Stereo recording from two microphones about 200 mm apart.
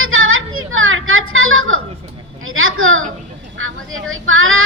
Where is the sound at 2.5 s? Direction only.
90° right.